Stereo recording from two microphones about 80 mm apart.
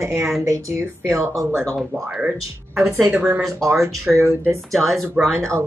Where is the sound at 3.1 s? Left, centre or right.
Right.